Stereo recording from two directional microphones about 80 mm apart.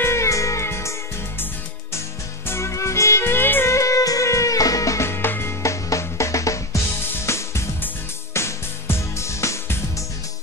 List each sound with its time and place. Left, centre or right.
0.0 s music: left
2.4 s music: left
3.7 s drum kit: left
5.6 s music: left